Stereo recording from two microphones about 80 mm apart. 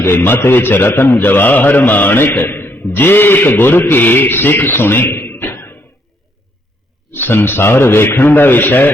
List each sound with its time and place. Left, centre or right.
0.0 s a man's voice: left
7.1 s a man's voice: left